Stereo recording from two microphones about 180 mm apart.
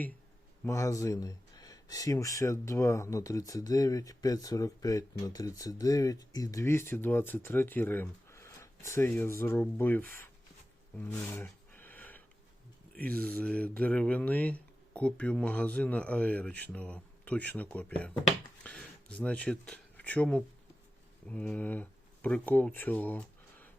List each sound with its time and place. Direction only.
0.6 s speech: 15° left (ahead or behind)
10.9 s a sound: 10° left (ahead or behind)
12.9 s speech: 5° left (ahead or behind)